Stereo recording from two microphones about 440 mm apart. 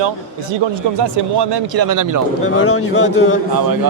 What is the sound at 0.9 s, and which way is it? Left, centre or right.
Speech, right.